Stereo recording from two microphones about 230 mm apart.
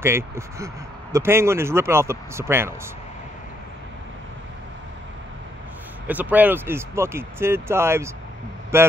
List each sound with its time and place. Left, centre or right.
0.0 s speech: centre
6.0 s speech: centre